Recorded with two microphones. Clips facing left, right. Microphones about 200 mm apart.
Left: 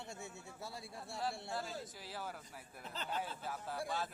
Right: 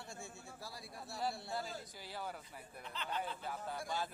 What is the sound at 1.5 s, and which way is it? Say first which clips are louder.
Speech: even; centre (ahead or behind).